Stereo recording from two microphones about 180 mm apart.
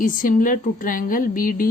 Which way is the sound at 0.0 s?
50° left (ahead or behind).